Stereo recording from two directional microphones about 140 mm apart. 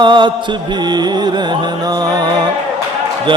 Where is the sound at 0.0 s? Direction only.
35° right (ahead or behind).